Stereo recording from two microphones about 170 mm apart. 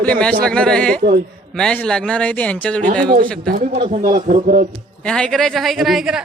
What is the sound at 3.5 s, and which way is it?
A man's voice, 55° right (ahead or behind).